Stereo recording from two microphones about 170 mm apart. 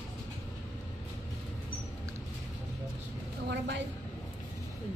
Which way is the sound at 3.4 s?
90° right.